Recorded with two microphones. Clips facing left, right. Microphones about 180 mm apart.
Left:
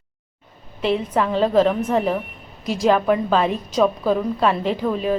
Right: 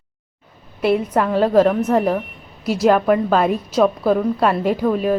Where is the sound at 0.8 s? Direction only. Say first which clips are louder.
Right 3 dB; 10° right (ahead or behind).